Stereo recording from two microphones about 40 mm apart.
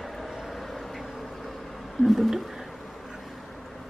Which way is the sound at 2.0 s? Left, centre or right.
Centre.